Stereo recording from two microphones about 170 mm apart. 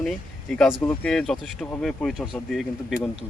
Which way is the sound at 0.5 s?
5° left (ahead or behind).